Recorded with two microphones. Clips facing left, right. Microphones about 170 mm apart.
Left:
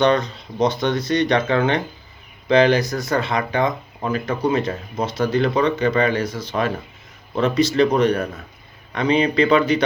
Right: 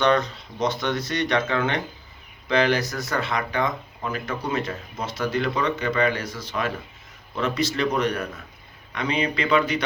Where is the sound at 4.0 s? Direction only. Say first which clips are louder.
Left 10 dB; 35° left (ahead or behind).